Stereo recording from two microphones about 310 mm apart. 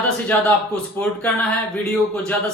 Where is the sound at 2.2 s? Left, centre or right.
Centre.